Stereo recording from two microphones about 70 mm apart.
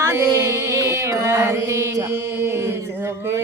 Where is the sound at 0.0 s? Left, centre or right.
Right.